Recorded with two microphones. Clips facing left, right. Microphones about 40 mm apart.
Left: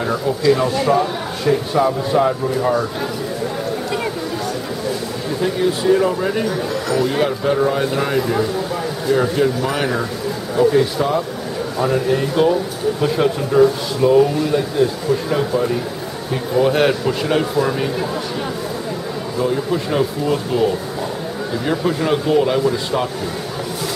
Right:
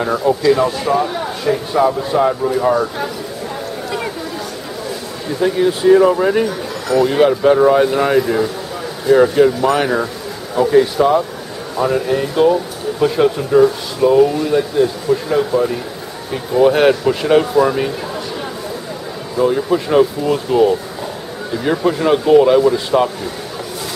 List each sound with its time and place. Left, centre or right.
0.0 s a man's voice: centre
5.4 s speech: centre
6.4 s a man's voice: centre
19.3 s speech: centre